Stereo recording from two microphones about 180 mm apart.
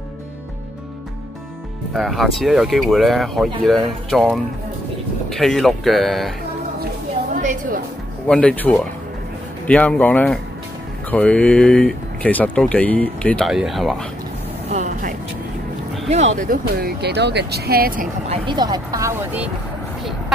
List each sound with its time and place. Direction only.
2.0 s speech: centre (ahead or behind)
8.3 s speech: 5° left (ahead or behind)
14.7 s vehicle: 45° right (ahead or behind)
16.1 s speech: 40° right (ahead or behind); by 18.0 s 55° right (ahead or behind)
18.3 s speech: 25° right (ahead or behind); by 19.5 s 10° right (ahead or behind)